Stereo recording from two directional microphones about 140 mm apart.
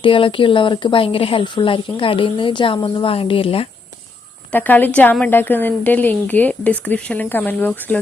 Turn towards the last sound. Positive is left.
turn(degrees=10)  # may be behind; listen again after turning